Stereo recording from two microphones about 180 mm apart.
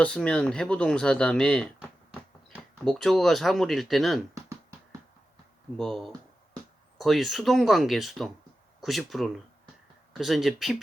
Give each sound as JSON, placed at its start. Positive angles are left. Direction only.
{"t": 0.0, "sound": "speech", "side_deg": 5}
{"t": 2.8, "sound": "speech", "side_deg": 0}
{"t": 4.4, "sound": "a sound", "side_deg": -15}
{"t": 5.7, "sound": "speech", "side_deg": 0}